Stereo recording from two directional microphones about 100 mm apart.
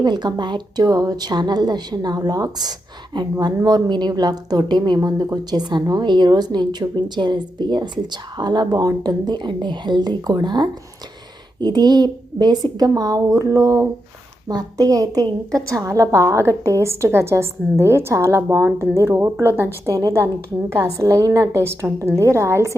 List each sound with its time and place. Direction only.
0.0 s a woman's voice: 45° right (ahead or behind); by 22.7 s 30° right (ahead or behind)